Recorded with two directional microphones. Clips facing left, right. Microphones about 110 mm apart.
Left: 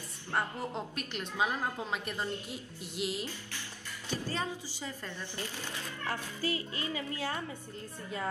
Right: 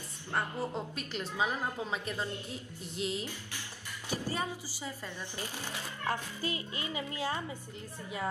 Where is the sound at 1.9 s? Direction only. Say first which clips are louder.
Even; 5° left (ahead or behind).